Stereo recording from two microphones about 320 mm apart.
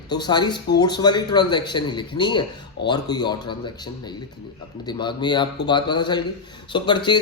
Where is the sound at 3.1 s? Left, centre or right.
Centre.